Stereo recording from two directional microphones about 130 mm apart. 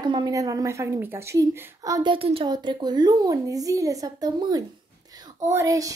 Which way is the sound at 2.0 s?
45° right (ahead or behind).